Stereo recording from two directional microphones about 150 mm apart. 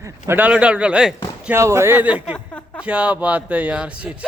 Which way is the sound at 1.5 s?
20° right (ahead or behind).